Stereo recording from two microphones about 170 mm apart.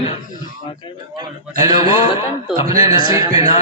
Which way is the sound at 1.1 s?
25° right (ahead or behind).